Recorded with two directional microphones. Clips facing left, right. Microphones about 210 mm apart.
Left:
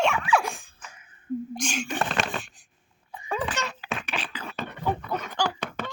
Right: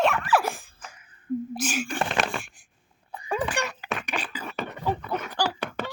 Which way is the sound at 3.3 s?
10° right (ahead or behind).